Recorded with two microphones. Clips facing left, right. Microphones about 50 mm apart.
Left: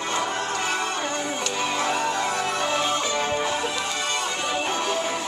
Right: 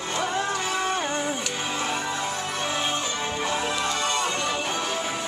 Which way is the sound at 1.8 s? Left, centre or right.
Left.